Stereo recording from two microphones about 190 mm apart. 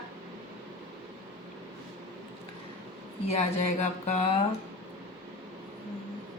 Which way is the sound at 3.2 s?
35° left (ahead or behind).